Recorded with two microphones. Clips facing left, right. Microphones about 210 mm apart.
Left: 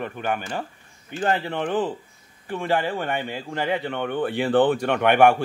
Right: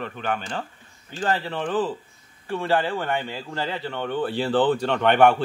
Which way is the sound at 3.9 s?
60° left (ahead or behind).